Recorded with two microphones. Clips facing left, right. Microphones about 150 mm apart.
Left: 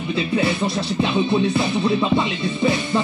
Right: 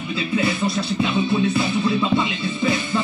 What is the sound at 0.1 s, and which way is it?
Music, 25° left (ahead or behind).